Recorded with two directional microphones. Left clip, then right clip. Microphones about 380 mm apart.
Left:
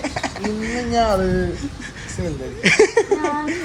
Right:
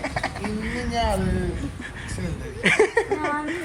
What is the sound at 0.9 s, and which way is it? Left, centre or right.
Speech, centre.